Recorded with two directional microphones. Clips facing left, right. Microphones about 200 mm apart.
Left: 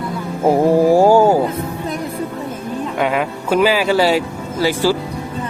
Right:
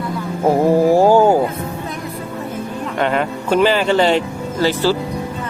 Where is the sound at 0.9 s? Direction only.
15° left (ahead or behind).